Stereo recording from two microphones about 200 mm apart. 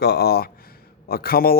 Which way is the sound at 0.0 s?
55° left (ahead or behind).